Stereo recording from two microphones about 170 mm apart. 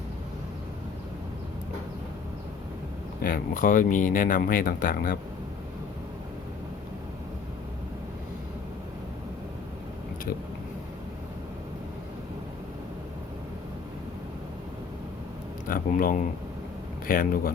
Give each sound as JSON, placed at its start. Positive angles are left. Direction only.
{"t": 3.2, "sound": "speech", "side_deg": 60}
{"t": 15.6, "sound": "speech", "side_deg": 55}